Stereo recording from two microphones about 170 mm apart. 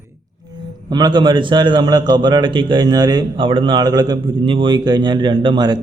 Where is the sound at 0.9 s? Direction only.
25° right (ahead or behind).